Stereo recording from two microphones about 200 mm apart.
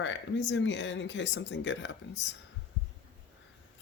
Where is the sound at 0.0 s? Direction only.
65° left (ahead or behind).